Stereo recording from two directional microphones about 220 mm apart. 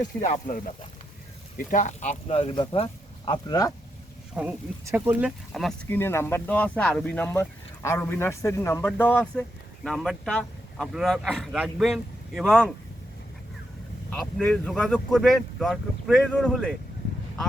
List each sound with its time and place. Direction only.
0.2 s speech: 35° left (ahead or behind); by 3.7 s 20° left (ahead or behind)
4.4 s speech: 5° right (ahead or behind)
14.1 s speech: 5° left (ahead or behind)